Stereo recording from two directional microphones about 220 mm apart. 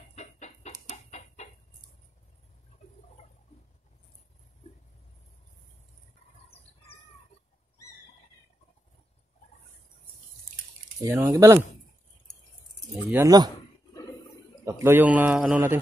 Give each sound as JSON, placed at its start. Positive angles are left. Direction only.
{"t": 0.1, "sound": "chicken", "side_deg": 30}
{"t": 11.0, "sound": "a man's voice", "side_deg": -10}
{"t": 13.1, "sound": "a man's voice", "side_deg": -15}
{"t": 14.6, "sound": "a man's voice", "side_deg": -10}